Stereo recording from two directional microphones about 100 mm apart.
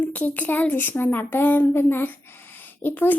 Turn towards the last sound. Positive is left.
turn(degrees=20)  # may be behind; listen again after turning